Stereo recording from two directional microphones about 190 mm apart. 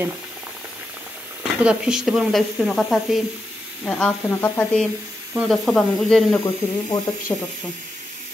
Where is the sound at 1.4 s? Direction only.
5° right (ahead or behind).